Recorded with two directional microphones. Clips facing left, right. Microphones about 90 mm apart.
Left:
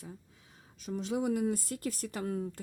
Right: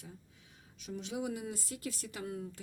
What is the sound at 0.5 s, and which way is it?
Speech, 40° left (ahead or behind).